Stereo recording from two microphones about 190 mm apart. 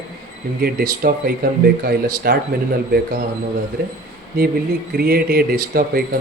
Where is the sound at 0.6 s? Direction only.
55° right (ahead or behind).